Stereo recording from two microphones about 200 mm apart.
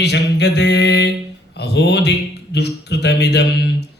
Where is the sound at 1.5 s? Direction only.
55° left (ahead or behind).